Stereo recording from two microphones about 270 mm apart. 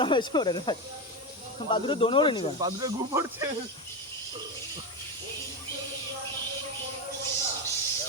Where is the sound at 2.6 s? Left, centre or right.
Centre.